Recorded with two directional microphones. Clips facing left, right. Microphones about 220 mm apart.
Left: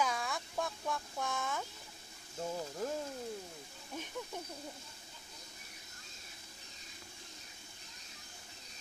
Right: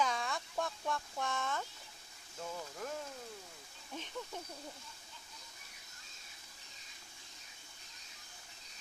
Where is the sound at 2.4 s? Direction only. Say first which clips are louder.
Left 5 dB; 25° left (ahead or behind).